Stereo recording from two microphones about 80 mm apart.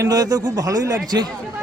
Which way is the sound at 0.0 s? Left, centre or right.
Right.